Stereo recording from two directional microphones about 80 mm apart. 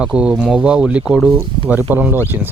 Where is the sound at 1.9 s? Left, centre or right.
Right.